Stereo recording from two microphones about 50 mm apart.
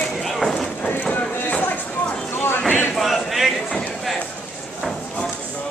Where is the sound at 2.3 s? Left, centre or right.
Left.